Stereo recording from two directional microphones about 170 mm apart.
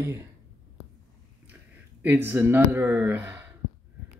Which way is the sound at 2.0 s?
10° right (ahead or behind).